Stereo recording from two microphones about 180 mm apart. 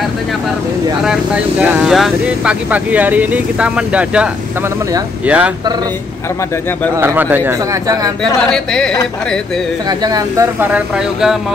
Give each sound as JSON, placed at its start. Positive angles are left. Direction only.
{"t": 1.0, "sound": "speech", "side_deg": -5}
{"t": 7.0, "sound": "speech", "side_deg": -10}
{"t": 8.4, "sound": "speech", "side_deg": 5}
{"t": 9.8, "sound": "speech", "side_deg": -20}